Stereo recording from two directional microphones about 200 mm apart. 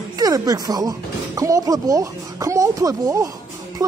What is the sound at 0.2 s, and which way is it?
Speech, 20° right (ahead or behind).